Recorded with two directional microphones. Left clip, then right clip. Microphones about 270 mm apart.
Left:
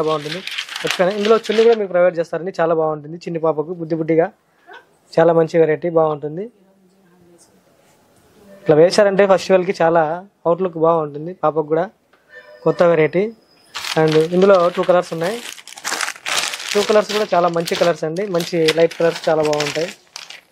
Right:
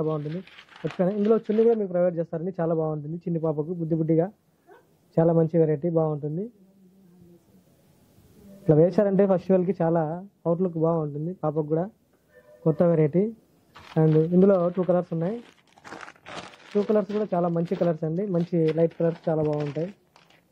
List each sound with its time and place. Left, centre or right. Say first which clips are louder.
0.0 s speech: left 9 dB; centre
2.8 s speech: left 9 dB; centre
3.2 s speech: left 8 dB; centre
8.6 s speech: left 9 dB; centre
10.8 s speech: left 10 dB; left; by 20.4 s centre